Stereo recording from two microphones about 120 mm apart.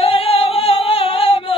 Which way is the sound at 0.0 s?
50° left (ahead or behind).